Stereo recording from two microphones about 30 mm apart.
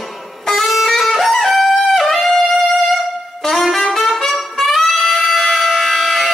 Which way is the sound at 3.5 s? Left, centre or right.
Centre.